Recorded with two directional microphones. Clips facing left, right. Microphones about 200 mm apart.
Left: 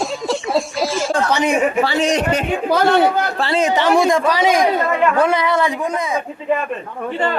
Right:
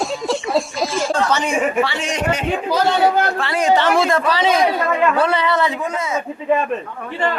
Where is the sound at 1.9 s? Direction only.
35° left (ahead or behind).